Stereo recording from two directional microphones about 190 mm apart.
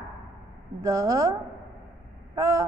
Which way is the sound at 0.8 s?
20° right (ahead or behind).